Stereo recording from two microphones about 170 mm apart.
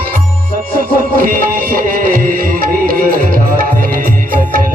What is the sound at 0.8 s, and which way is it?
Music, 55° right (ahead or behind).